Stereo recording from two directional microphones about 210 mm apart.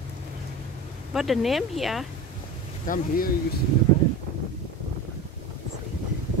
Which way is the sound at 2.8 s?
40° left (ahead or behind).